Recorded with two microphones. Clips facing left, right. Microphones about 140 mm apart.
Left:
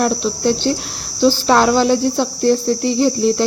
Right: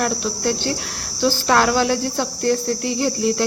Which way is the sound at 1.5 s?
15° left (ahead or behind).